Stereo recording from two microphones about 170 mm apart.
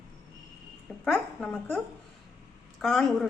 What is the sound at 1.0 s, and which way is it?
A woman's voice, centre (ahead or behind).